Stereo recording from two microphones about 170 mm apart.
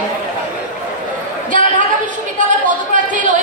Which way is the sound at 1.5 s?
50° right (ahead or behind).